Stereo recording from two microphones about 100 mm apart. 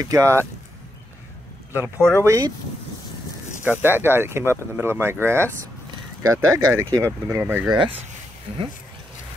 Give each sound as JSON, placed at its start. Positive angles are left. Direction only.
{"t": 0.0, "sound": "speech", "side_deg": -35}
{"t": 1.7, "sound": "speech", "side_deg": -20}
{"t": 2.1, "sound": "speech", "side_deg": -30}
{"t": 3.8, "sound": "speech", "side_deg": -20}
{"t": 7.6, "sound": "speech", "side_deg": -50}
{"t": 8.5, "sound": "speech", "side_deg": -90}